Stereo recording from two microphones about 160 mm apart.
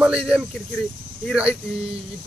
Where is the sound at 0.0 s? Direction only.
5° right (ahead or behind).